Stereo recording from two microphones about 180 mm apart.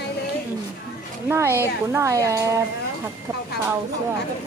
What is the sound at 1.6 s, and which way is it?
Speech, 15° right (ahead or behind).